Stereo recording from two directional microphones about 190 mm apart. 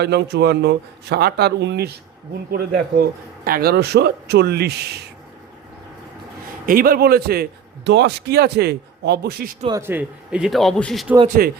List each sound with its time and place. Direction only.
0.0 s a man's voice: 60° right (ahead or behind)
6.7 s a man's voice: 50° right (ahead or behind)
9.6 s speech: 15° right (ahead or behind); by 11.1 s centre (ahead or behind)
11.4 s a man's voice: 50° right (ahead or behind)